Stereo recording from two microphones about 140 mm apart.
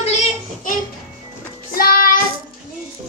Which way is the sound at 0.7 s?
75° left (ahead or behind).